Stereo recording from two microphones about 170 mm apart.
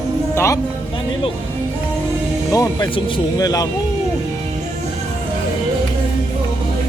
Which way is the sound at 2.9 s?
20° left (ahead or behind).